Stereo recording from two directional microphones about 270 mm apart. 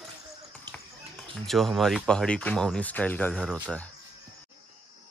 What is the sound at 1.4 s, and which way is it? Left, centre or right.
Speech, centre.